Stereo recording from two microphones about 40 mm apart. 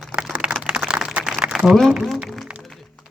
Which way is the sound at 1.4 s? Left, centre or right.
Right.